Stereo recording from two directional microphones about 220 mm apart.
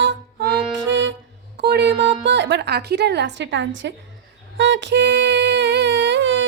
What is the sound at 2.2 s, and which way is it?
A woman's voice, 55° right (ahead or behind).